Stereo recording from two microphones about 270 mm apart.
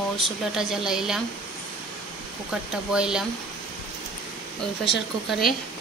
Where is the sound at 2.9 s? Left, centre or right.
Centre.